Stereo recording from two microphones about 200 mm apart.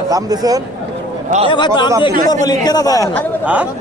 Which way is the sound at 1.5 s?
20° left (ahead or behind).